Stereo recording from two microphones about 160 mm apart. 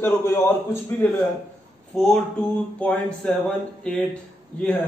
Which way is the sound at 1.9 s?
Centre (ahead or behind).